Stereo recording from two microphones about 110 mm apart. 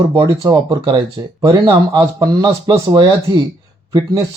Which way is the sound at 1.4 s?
40° right (ahead or behind).